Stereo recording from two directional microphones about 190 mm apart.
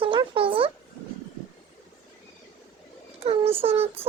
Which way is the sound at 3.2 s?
30° right (ahead or behind).